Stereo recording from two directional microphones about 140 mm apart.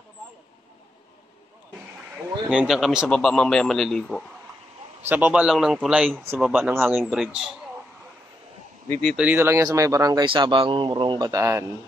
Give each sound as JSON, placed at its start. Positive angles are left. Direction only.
{"t": 2.4, "sound": "a man's voice", "side_deg": -5}
{"t": 5.1, "sound": "a man's voice", "side_deg": -10}
{"t": 9.0, "sound": "speech", "side_deg": -5}
{"t": 11.2, "sound": "speech", "side_deg": -20}